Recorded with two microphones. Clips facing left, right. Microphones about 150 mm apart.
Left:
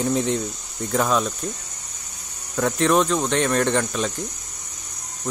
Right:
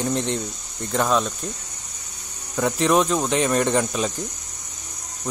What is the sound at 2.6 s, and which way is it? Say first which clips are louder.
Cricket: even; centre (ahead or behind).